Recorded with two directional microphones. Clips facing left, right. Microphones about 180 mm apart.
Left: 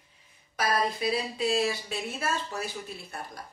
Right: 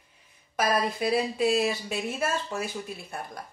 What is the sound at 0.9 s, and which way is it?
Speech, 55° right (ahead or behind).